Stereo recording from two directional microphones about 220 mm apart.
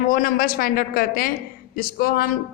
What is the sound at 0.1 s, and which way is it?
A woman's voice, 40° left (ahead or behind).